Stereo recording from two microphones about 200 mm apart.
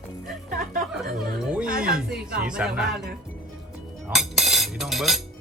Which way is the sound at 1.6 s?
45° right (ahead or behind).